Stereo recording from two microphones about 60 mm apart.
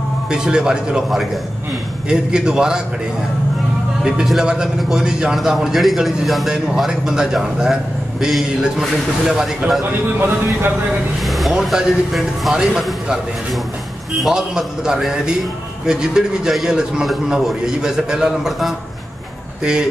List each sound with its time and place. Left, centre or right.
0.3 s a man's voice: centre
4.0 s a man's voice: centre
10.1 s speech: right
11.2 s a man's voice: centre
14.2 s a man's voice: centre